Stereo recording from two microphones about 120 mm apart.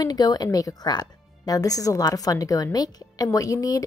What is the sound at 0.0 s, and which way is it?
A woman's voice, 35° left (ahead or behind).